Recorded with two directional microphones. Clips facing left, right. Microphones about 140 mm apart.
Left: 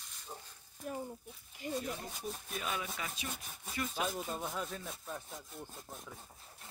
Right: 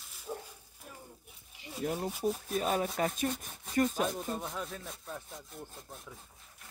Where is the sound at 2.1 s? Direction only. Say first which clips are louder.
Right 10 dB; 5° right (ahead or behind).